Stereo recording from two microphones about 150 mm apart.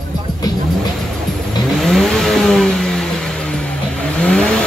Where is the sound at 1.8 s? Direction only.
Centre (ahead or behind).